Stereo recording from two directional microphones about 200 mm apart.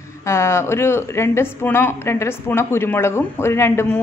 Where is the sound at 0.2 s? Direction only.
15° left (ahead or behind).